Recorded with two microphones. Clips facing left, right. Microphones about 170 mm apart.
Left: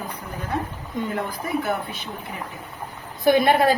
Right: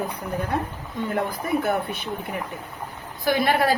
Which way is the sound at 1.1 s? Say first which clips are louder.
Right 4 dB; 55° right (ahead or behind).